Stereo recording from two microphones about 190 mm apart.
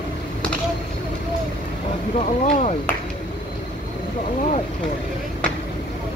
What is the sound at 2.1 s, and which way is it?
Speech, 35° left (ahead or behind).